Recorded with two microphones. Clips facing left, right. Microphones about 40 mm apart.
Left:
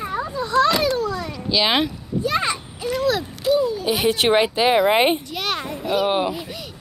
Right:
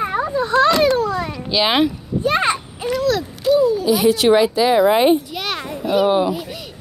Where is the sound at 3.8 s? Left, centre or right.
Left.